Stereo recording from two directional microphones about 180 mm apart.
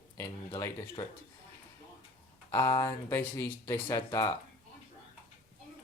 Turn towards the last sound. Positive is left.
turn(degrees=20)  # may be behind; listen again after turning